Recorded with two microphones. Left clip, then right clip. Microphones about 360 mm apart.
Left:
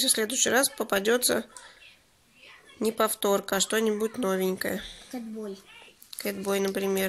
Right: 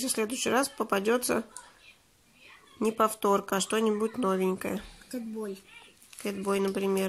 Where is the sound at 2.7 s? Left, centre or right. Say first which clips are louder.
Even; centre.